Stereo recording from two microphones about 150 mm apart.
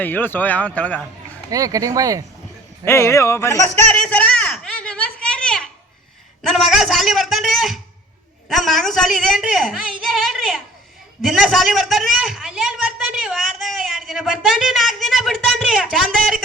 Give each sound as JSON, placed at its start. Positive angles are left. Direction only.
{"t": 0.0, "sound": "speech", "side_deg": 10}
{"t": 1.5, "sound": "speech", "side_deg": -25}
{"t": 2.8, "sound": "speech", "side_deg": 15}
{"t": 3.9, "sound": "a sound", "side_deg": 10}
{"t": 8.4, "sound": "a man's voice", "side_deg": 0}
{"t": 11.2, "sound": "a sound", "side_deg": 0}